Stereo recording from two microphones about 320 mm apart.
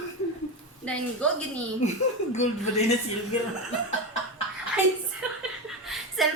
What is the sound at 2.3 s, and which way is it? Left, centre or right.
Speech, left.